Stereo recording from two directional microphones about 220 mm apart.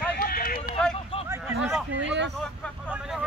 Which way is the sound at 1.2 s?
10° right (ahead or behind).